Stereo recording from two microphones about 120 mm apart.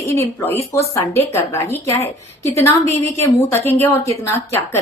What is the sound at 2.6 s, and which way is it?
A woman's voice, 25° left (ahead or behind).